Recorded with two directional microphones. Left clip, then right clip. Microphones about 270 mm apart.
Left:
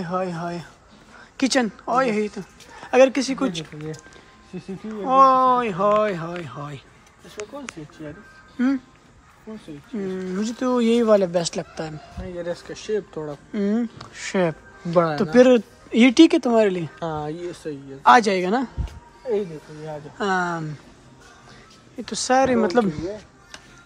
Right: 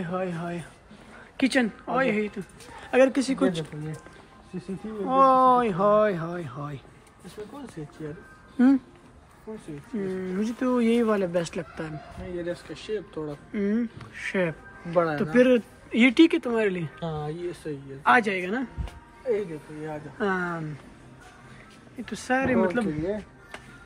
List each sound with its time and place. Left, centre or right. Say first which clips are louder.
0.0 s speech: left 5 dB; centre
5.0 s speech: left 4 dB; centre
9.9 s speech: left 2 dB; centre
12.4 s speech: left 7 dB; left
13.5 s speech: left 4 dB; centre
14.9 s speech: left 4 dB; left
15.3 s speech: left 6 dB; centre
17.0 s speech: left 3 dB; left
18.0 s speech: left 6 dB; centre
20.2 s speech: left 5 dB; centre
21.9 s speech: left 7 dB; centre